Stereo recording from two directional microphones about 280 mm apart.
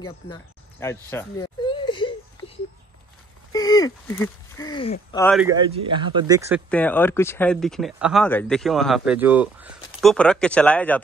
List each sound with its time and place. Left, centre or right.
0.0 s speech: centre
3.5 s speech: centre
5.2 s speech: centre
5.5 s speech: centre
6.7 s speech: centre